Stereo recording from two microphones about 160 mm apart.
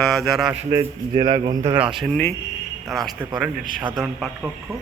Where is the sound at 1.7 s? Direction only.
5° right (ahead or behind).